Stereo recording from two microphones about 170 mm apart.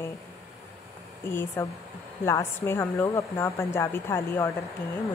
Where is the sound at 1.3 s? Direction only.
15° left (ahead or behind).